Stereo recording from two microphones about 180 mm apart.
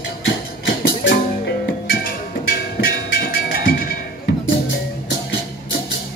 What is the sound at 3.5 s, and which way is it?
Music, 55° left (ahead or behind).